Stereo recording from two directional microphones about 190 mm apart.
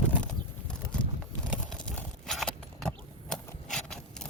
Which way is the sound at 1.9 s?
Centre (ahead or behind).